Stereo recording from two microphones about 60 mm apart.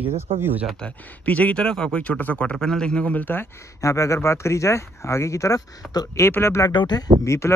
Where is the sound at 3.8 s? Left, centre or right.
Left.